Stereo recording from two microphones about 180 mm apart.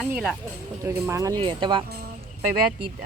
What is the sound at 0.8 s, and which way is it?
Speech, 15° right (ahead or behind).